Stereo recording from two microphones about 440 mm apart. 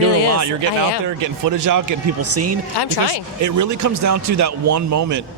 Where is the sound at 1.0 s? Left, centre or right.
Right.